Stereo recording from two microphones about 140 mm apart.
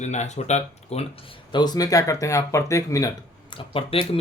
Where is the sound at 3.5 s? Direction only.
40° left (ahead or behind).